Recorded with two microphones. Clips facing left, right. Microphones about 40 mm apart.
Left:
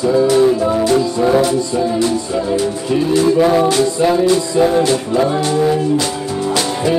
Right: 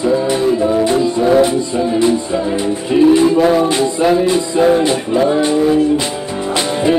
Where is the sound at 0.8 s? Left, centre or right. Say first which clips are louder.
Even; right.